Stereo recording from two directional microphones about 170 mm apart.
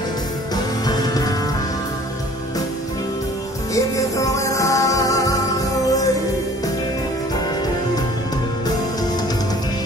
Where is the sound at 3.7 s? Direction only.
20° left (ahead or behind).